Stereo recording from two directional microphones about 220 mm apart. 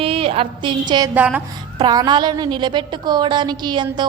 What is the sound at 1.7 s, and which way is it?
Music, 20° right (ahead or behind).